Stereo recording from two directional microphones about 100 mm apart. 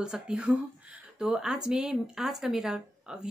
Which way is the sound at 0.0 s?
5° right (ahead or behind).